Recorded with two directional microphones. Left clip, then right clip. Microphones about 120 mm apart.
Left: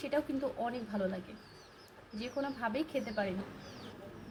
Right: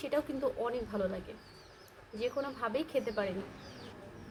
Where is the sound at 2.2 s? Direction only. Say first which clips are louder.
Right 2 dB; 25° right (ahead or behind).